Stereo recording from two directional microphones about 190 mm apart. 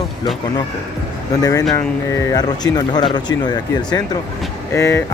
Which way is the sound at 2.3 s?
20° left (ahead or behind).